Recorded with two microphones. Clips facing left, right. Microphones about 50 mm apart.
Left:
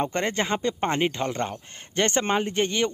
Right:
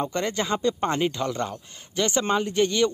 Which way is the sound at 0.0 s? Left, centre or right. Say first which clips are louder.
Left 1 dB; left.